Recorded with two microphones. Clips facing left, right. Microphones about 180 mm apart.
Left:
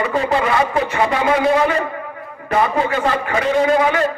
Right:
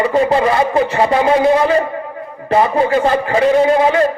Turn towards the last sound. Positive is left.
turn(degrees=-30)  # may be behind; listen again after turning